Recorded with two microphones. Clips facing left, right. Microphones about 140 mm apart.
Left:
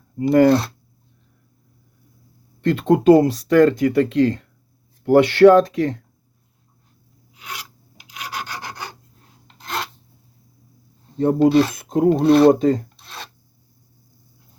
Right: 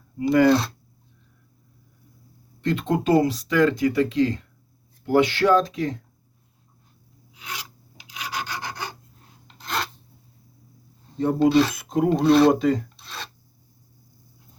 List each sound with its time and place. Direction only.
0.2 s speech: 40° left (ahead or behind)
2.6 s speech: 55° left (ahead or behind)
8.3 s filing: centre (ahead or behind)
9.6 s filing: 5° left (ahead or behind)
11.3 s speech: 10° left (ahead or behind)
11.7 s speech: 45° left (ahead or behind)